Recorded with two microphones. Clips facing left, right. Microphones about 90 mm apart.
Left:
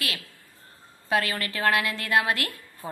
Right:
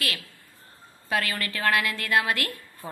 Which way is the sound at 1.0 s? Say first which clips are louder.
Left 2 dB; 25° left (ahead or behind).